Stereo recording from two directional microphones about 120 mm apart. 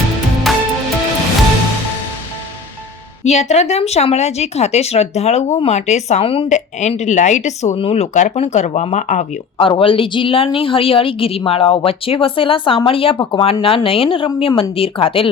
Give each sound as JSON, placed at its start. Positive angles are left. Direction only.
{"t": 0.5, "sound": "music", "side_deg": 0}
{"t": 3.2, "sound": "speech", "side_deg": 70}
{"t": 6.2, "sound": "a woman's voice", "side_deg": 50}
{"t": 6.5, "sound": "speech", "side_deg": 75}
{"t": 7.8, "sound": "speech", "side_deg": 60}
{"t": 9.6, "sound": "a woman's voice", "side_deg": 45}